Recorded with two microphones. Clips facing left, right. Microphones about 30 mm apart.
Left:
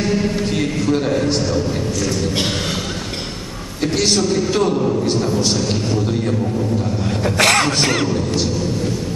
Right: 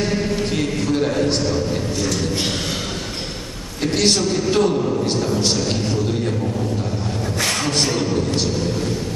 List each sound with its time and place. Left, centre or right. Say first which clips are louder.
0.9 s a man's voice: even; centre
4.6 s a man's voice: even; centre
7.3 s speech: left 6 dB; left